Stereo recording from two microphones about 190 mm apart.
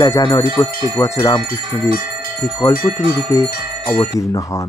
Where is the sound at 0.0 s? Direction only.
20° left (ahead or behind).